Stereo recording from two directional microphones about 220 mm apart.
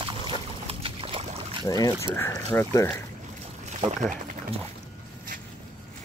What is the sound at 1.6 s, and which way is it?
Speech, 15° left (ahead or behind).